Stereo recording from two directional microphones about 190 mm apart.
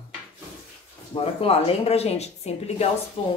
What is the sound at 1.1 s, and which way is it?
Speech, 30° left (ahead or behind).